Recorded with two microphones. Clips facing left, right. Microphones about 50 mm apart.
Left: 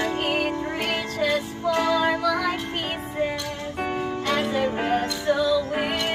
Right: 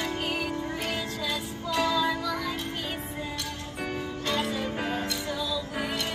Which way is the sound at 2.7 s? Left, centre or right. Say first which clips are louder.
Left 5 dB; left.